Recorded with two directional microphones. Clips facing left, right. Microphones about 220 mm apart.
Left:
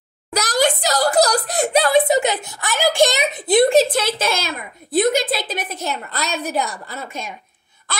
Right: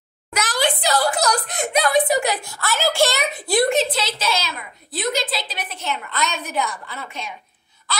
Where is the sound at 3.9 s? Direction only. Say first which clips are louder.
Left 4 dB; 50° left (ahead or behind).